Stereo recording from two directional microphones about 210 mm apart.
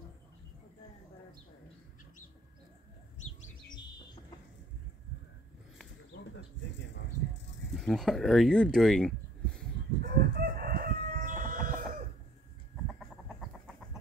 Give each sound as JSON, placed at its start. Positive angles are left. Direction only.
{"t": 7.7, "sound": "speech", "side_deg": 0}
{"t": 10.0, "sound": "chicken", "side_deg": -50}
{"t": 12.8, "sound": "chicken", "side_deg": 0}